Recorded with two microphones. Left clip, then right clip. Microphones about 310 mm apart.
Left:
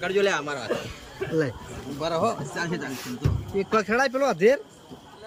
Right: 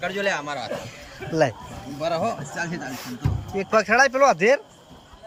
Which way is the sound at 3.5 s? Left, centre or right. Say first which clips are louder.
Right 4 dB; centre.